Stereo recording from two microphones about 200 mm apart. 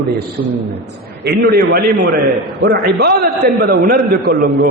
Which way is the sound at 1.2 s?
55° right (ahead or behind).